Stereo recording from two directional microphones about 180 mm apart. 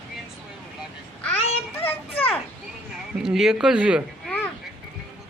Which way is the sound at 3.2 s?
Centre (ahead or behind).